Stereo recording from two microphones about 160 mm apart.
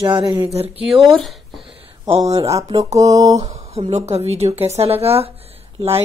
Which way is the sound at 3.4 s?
40° right (ahead or behind).